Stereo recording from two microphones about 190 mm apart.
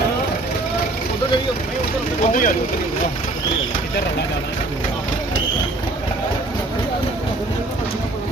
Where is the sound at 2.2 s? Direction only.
45° left (ahead or behind).